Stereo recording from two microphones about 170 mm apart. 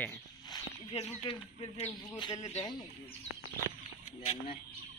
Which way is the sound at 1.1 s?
30° left (ahead or behind).